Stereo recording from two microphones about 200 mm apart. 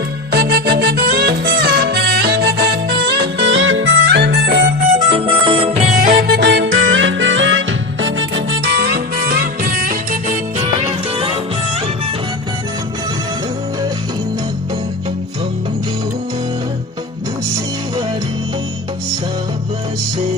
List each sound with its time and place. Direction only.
0.3 s music: 55° right (ahead or behind); by 5.9 s 30° right (ahead or behind)
6.0 s music: 45° right (ahead or behind); by 8.1 s 70° right (ahead or behind)
8.4 s music: 55° right (ahead or behind)
10.8 s music: 25° right (ahead or behind)